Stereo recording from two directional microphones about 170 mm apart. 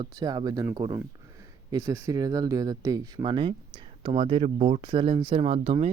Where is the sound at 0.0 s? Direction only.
25° right (ahead or behind).